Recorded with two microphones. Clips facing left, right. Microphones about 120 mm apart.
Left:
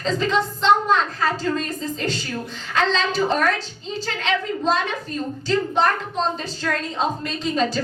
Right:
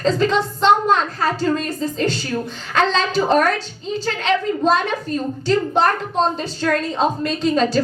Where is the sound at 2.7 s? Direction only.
60° right (ahead or behind).